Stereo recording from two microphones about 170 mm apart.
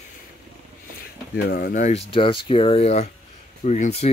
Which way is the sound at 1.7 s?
40° left (ahead or behind).